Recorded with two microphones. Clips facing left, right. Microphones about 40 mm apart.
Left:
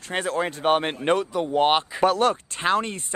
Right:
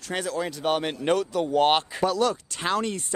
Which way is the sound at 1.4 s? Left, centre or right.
Centre.